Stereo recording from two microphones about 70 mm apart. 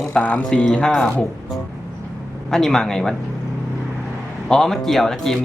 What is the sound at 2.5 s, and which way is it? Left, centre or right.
Speech, centre.